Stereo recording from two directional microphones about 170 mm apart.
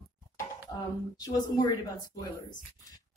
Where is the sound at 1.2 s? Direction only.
20° left (ahead or behind).